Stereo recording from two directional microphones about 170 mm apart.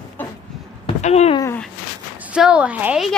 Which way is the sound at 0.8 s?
40° left (ahead or behind).